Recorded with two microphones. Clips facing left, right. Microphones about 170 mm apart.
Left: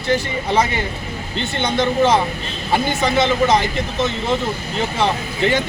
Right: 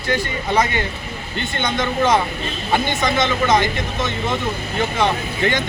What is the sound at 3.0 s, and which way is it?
Speech, 30° left (ahead or behind).